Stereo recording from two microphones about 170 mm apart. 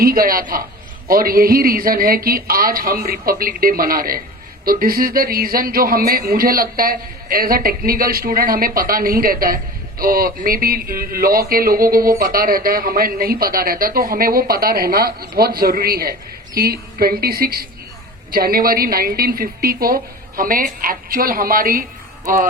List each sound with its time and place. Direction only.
0.0 s a man's voice: 60° right (ahead or behind)